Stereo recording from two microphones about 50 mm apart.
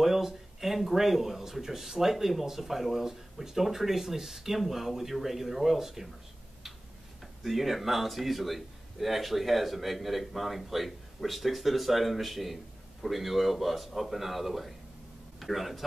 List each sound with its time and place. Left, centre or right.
0.0 s speech: centre
7.4 s speech: centre